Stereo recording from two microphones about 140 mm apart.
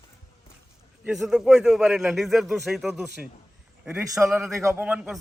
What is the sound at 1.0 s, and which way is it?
A man's voice, 5° right (ahead or behind).